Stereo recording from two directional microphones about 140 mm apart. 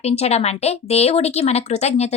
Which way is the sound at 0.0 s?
50° left (ahead or behind).